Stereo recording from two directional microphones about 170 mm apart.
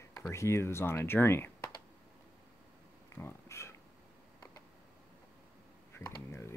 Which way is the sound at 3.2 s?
15° left (ahead or behind).